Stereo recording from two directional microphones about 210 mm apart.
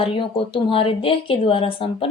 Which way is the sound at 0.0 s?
25° left (ahead or behind).